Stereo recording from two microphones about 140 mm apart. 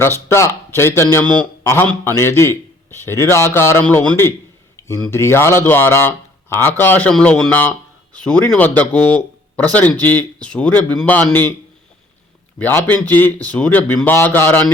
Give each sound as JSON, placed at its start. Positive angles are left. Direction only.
{"t": 0.3, "sound": "a man's voice", "side_deg": 20}
{"t": 12.5, "sound": "speech", "side_deg": 15}